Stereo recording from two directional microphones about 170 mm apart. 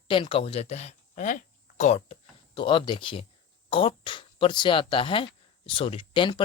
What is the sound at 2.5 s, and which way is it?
Speech, 30° left (ahead or behind).